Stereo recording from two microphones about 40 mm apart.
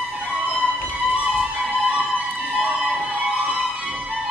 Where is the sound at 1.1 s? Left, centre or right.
Right.